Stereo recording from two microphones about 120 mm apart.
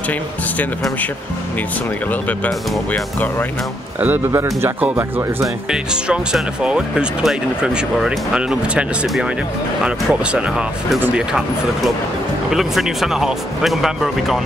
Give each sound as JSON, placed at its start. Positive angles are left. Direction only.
{"t": 2.2, "sound": "speech", "side_deg": 15}
{"t": 4.0, "sound": "speech", "side_deg": -20}